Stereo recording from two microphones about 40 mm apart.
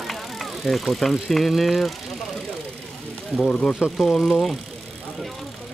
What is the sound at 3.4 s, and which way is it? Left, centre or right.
Speech, left.